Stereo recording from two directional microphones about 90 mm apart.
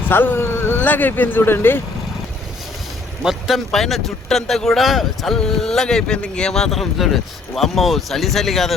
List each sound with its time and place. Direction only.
0.1 s speech: 20° left (ahead or behind)
3.2 s speech: 5° right (ahead or behind)